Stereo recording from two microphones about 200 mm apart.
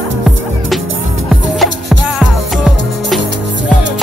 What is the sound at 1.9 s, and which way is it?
Music, centre (ahead or behind).